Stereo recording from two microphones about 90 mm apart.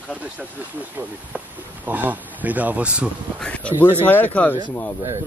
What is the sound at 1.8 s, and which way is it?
Speech, 20° right (ahead or behind).